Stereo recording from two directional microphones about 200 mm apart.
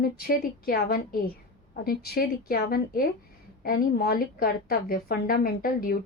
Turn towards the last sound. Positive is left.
turn(degrees=45)  # may be behind; listen again after turning